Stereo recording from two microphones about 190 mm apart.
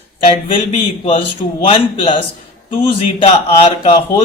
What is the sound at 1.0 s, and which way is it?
Speech, 30° left (ahead or behind).